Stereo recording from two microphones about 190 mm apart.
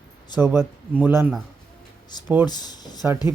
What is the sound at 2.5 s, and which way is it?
Speech, 20° left (ahead or behind).